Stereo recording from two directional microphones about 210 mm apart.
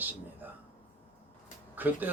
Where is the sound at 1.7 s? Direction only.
10° right (ahead or behind).